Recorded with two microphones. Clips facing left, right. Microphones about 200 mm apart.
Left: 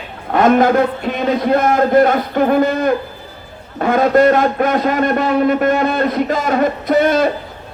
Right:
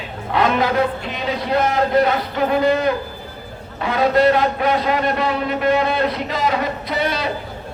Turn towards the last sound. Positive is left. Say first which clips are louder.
# left 9 dB
turn(degrees=50)  # may be behind; listen again after turning